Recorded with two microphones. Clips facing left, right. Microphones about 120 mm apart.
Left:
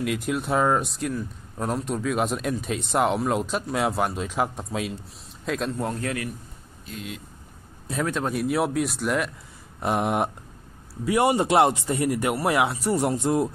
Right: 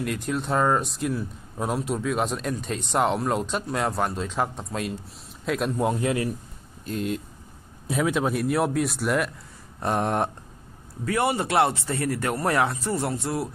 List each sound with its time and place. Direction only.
0.0 s a man's voice: 5° left (ahead or behind); by 6.2 s 20° right (ahead or behind)
6.9 s speech: 45° right (ahead or behind)
7.9 s speech: 5° right (ahead or behind)
11.1 s speech: 20° left (ahead or behind)